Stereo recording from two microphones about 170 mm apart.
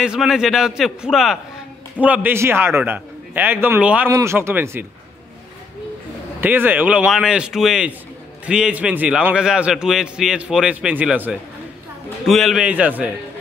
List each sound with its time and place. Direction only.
0.0 s a man's voice: 5° right (ahead or behind)
6.4 s a man's voice: 10° right (ahead or behind)